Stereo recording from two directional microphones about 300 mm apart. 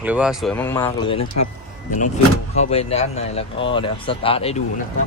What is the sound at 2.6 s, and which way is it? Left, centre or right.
Speech, left.